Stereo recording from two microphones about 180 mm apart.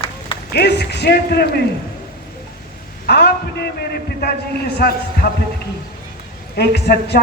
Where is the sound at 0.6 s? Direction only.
65° left (ahead or behind).